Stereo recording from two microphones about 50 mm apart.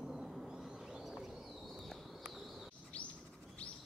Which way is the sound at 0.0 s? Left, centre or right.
Centre.